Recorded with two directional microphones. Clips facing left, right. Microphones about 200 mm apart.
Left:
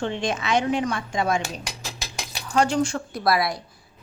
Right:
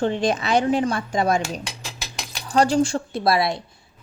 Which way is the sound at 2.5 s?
35° right (ahead or behind).